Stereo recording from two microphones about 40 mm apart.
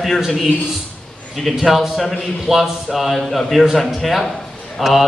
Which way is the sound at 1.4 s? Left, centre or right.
Centre.